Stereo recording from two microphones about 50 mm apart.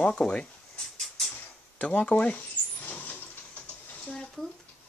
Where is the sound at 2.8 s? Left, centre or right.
Left.